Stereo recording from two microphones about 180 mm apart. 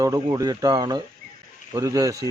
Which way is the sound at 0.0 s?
20° right (ahead or behind).